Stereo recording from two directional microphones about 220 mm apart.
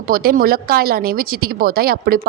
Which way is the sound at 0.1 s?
40° right (ahead or behind).